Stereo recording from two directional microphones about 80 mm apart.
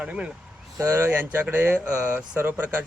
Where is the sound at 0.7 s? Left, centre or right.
Right.